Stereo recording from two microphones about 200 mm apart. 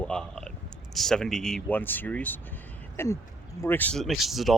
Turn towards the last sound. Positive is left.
turn(degrees=0)  # may be behind; listen again after turning